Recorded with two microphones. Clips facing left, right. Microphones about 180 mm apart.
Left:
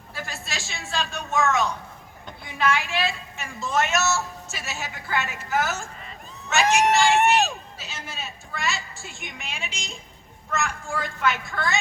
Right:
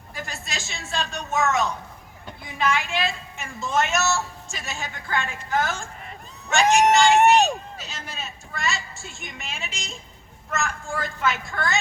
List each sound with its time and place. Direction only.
0.2 s a sound: centre (ahead or behind)
0.5 s speech: centre (ahead or behind)
6.8 s speech: 20° right (ahead or behind)
7.8 s speech: centre (ahead or behind)